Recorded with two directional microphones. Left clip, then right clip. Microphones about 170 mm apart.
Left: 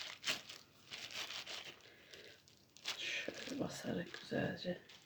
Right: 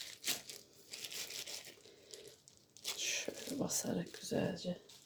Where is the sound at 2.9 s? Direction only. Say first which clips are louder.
Right 3 dB; 30° right (ahead or behind).